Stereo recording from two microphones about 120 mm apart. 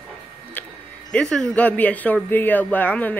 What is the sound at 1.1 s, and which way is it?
Speech, 5° left (ahead or behind).